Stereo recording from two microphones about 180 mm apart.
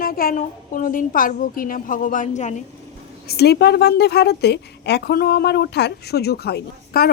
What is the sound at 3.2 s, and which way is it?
A woman's voice, 65° left (ahead or behind).